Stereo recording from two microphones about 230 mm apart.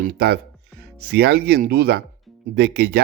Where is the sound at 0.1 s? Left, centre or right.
Right.